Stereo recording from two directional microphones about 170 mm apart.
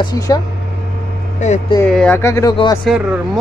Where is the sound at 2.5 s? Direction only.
30° left (ahead or behind).